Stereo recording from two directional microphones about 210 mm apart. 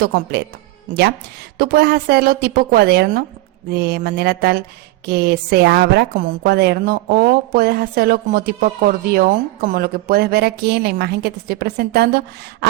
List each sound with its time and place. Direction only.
0.0 s a woman's voice: 50° right (ahead or behind)